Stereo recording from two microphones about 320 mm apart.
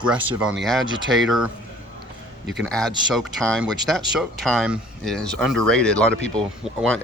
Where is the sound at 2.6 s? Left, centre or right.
Centre.